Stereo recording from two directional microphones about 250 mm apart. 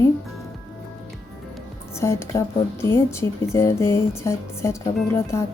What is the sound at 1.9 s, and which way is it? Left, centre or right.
Speech, centre.